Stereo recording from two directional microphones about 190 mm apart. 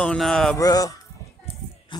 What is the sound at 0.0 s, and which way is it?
Speech, 5° left (ahead or behind).